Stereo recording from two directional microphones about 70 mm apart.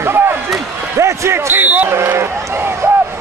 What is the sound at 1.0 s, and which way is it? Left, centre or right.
Basketball bounce, right.